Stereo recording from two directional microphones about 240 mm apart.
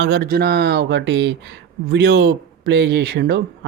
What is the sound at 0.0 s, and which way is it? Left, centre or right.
Speech, right.